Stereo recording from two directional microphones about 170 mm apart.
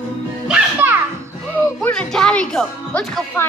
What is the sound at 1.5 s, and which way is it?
A woman's voice, 5° left (ahead or behind).